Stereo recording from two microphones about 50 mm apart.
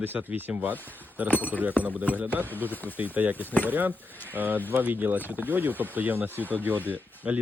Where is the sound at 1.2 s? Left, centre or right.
Left.